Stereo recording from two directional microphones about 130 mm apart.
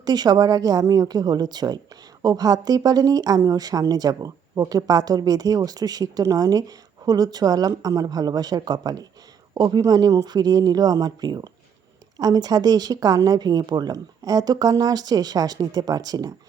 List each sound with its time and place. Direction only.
0.0 s a woman's voice: 30° right (ahead or behind)